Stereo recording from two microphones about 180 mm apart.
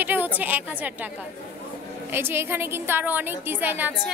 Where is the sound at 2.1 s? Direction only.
10° right (ahead or behind).